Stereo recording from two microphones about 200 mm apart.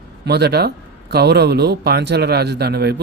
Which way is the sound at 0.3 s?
55° right (ahead or behind).